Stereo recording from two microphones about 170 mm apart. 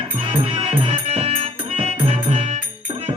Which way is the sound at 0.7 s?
35° right (ahead or behind).